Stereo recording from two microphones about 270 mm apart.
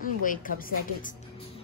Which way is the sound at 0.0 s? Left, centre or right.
Left.